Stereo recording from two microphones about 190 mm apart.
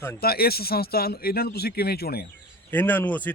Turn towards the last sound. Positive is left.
turn(degrees=10)  # may be behind; listen again after turning